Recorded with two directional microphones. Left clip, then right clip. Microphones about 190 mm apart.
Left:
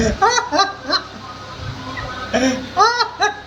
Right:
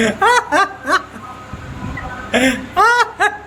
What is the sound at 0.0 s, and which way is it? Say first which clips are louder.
Snicker: right 3 dB; 10° right (ahead or behind).